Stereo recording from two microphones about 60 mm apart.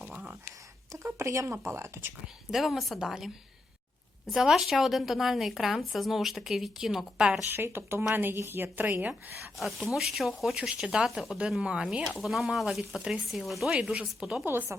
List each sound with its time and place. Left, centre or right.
0.0 s a sound: right
0.9 s a woman's voice: right
2.5 s a woman's voice: centre
4.4 s a woman's voice: centre
7.5 s a woman's voice: right
9.4 s a woman's voice: centre
10.6 s speech: centre
11.6 s speech: centre
12.1 s a woman's voice: centre
14.7 s a woman's voice: right